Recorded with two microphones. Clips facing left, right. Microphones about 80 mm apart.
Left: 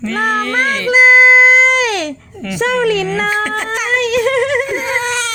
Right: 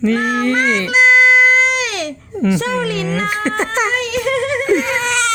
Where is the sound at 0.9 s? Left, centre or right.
Left.